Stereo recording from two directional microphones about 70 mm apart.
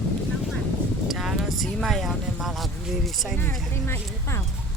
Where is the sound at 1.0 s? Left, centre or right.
Centre.